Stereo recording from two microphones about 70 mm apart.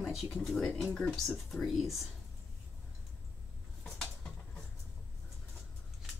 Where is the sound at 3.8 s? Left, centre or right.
Centre.